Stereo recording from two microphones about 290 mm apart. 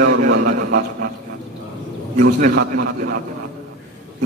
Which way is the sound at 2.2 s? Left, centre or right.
Right.